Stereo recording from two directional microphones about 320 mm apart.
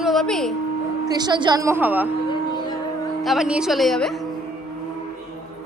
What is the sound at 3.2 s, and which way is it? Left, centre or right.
Speech, centre.